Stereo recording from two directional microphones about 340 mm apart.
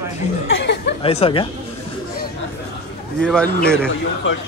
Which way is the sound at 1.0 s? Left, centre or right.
Centre.